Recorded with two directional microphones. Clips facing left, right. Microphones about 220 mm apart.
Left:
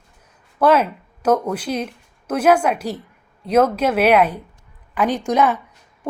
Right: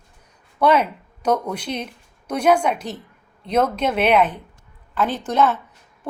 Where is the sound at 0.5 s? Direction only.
5° left (ahead or behind).